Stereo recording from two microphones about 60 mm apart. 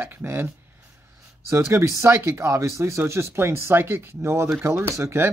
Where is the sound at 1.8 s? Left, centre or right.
Right.